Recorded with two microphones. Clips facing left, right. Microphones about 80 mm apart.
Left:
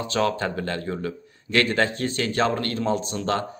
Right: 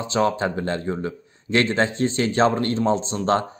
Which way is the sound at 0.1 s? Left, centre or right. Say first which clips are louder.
Right 3 dB; right.